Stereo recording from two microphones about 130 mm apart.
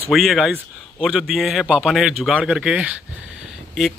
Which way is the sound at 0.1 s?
Centre (ahead or behind).